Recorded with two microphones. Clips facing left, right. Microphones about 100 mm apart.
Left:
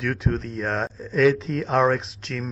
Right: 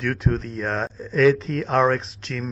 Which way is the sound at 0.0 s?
Centre (ahead or behind).